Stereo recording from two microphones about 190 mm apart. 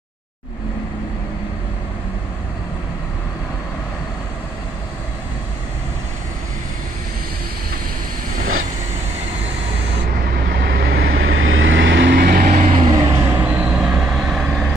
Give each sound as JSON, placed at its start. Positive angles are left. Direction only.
{"t": 10.3, "sound": "vehicle", "side_deg": -55}
{"t": 11.1, "sound": "vehicle", "side_deg": -90}
{"t": 12.6, "sound": "vehicle", "side_deg": -35}
{"t": 13.1, "sound": "vehicle", "side_deg": -10}